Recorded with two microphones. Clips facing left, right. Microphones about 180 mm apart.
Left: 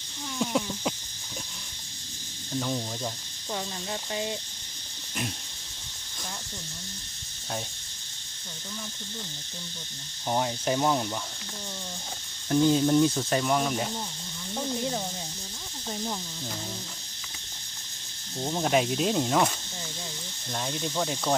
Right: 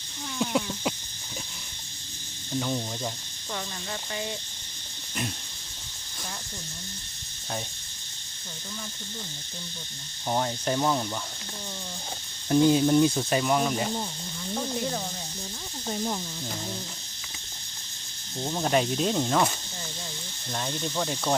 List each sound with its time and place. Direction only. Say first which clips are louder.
0.3 s a sound: right 1 dB; centre (ahead or behind)
2.6 s speech: right 1 dB; centre (ahead or behind)
4.1 s cricket: left 2 dB; 25° left (ahead or behind)
10.2 s speech: even; 5° left (ahead or behind)
12.5 s speech: right 2 dB; 15° right (ahead or behind)
18.4 s speech: even; 5° left (ahead or behind)
20.5 s speech: even; 5° left (ahead or behind)